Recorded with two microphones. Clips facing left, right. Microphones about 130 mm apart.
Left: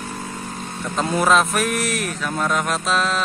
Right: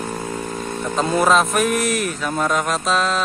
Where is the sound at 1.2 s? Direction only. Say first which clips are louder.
Right 1 dB; centre (ahead or behind).